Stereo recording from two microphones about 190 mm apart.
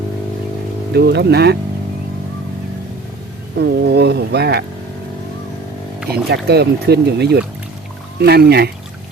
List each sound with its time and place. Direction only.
0.9 s speech: 60° right (ahead or behind)
3.6 s speech: 60° right (ahead or behind)
6.3 s speech: 60° right (ahead or behind)